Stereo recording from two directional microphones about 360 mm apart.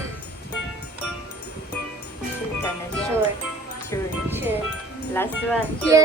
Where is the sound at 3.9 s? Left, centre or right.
Centre.